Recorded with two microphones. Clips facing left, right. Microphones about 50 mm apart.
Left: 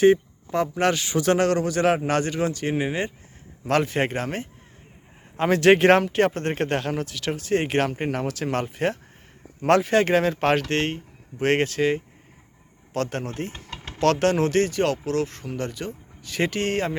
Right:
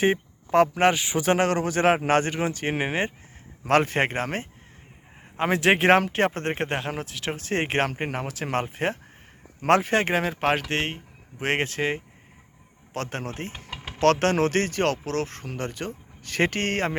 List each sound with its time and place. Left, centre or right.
0.5 s speech: right
0.8 s speech: right
5.4 s speech: centre
6.0 s speech: right
13.7 s a sound: centre
14.0 s speech: right